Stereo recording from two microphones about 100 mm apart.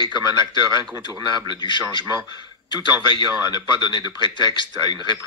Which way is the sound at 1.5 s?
50° left (ahead or behind).